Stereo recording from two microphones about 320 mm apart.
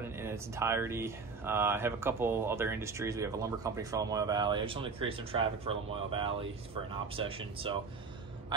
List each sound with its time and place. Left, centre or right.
0.0 s speech: centre